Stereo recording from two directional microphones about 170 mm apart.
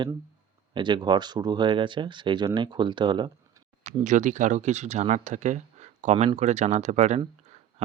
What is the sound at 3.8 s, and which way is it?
Speech, 45° right (ahead or behind).